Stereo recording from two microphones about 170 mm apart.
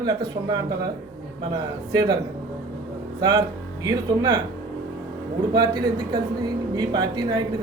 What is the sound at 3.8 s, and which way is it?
Speech, 25° right (ahead or behind).